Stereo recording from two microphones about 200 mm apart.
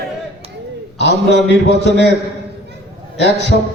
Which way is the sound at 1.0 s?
60° left (ahead or behind).